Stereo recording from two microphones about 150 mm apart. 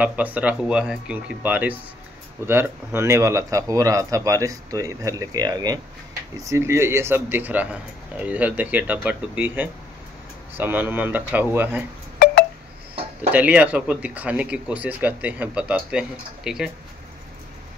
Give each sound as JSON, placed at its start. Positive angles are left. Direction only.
{"t": 0.0, "sound": "speech", "side_deg": -10}
{"t": 13.3, "sound": "speech", "side_deg": -10}